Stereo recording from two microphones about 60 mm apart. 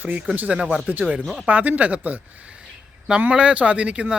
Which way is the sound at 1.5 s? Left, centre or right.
Right.